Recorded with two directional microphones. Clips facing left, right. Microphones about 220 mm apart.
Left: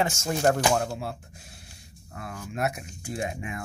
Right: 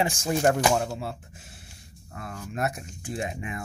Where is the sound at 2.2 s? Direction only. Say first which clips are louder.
Even; centre (ahead or behind).